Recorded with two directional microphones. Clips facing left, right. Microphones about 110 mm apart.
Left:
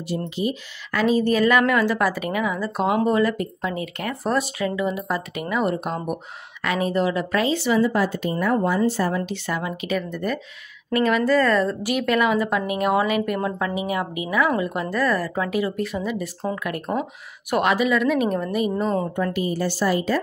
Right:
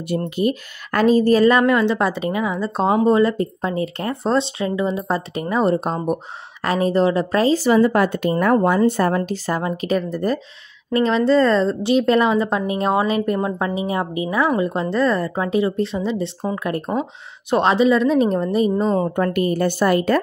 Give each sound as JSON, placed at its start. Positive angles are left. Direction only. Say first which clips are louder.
{"t": 0.1, "sound": "a woman's voice", "louder": "right 5 dB", "side_deg": -55}
{"t": 19.1, "sound": "a woman's voice", "louder": "right 5 dB", "side_deg": -55}